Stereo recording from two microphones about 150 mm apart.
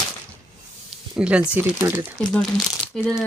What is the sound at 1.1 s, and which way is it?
Speech, 5° right (ahead or behind).